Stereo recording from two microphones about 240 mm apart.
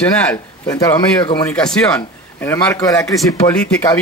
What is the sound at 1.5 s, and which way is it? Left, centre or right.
Speech, centre.